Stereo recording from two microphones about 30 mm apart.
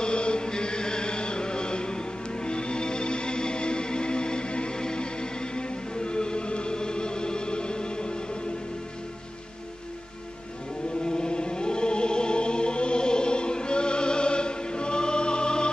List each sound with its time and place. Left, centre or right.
0.0 s chant: left
11.0 s music: left